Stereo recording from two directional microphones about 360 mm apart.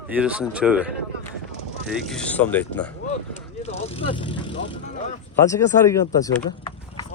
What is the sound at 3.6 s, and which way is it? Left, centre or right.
Vehicle, centre.